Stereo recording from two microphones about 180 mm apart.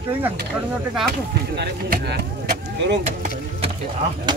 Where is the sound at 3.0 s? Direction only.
40° right (ahead or behind).